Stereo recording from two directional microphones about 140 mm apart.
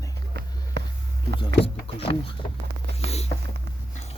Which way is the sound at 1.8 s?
40° left (ahead or behind).